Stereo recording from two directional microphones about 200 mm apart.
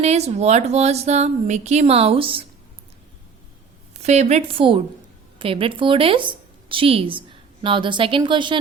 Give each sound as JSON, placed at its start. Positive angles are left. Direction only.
{"t": 0.0, "sound": "speech", "side_deg": -30}
{"t": 4.0, "sound": "a woman's voice", "side_deg": -35}